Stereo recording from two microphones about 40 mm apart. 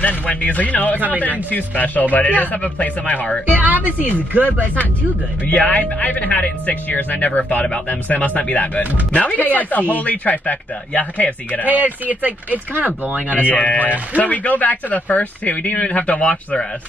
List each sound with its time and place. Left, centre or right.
0.0 s speech: left
3.4 s speech: right
5.5 s speech: left
11.6 s speech: right
13.3 s speech: left